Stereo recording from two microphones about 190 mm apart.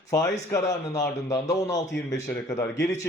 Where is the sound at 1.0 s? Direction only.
15° left (ahead or behind).